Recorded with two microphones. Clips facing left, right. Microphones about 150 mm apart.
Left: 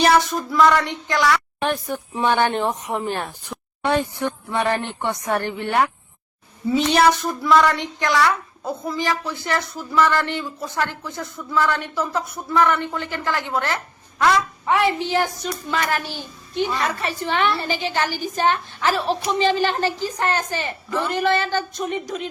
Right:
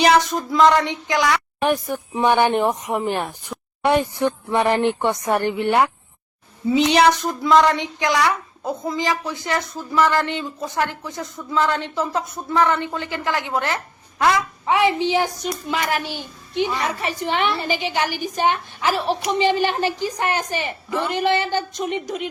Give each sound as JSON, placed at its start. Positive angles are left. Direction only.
{"t": 0.0, "sound": "a woman's voice", "side_deg": -15}